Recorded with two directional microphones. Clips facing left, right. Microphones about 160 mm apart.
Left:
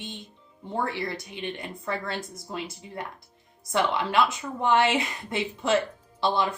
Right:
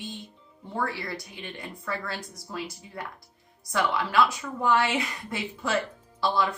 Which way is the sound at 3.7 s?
25° left (ahead or behind).